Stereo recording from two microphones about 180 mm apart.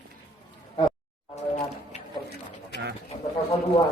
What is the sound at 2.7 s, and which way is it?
Bird, 65° left (ahead or behind).